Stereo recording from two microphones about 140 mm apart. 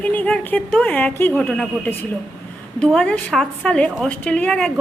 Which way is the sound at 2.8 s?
5° left (ahead or behind).